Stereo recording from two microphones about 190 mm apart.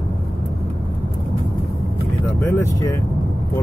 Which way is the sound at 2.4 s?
10° left (ahead or behind).